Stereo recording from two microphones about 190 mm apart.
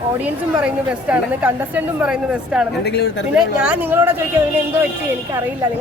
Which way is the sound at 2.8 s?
60° left (ahead or behind).